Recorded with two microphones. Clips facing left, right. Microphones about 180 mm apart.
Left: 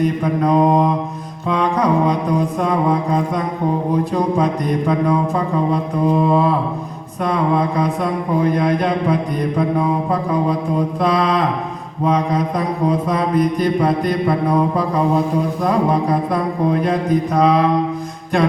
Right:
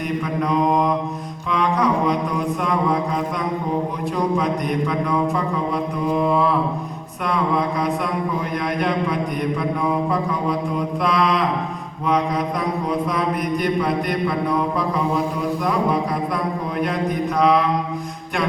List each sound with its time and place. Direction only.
0.0 s mantra: 35° left (ahead or behind)
1.5 s music: 30° left (ahead or behind)
5.7 s mantra: 30° left (ahead or behind)
8.5 s mantra: 30° left (ahead or behind)
10.8 s mantra: 30° left (ahead or behind)
13.1 s mantra: 30° left (ahead or behind)